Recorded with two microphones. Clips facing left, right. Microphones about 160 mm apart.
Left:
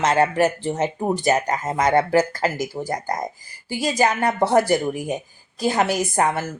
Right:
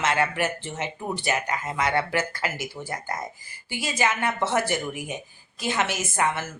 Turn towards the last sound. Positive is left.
turn(degrees=40)  # may be behind; listen again after turning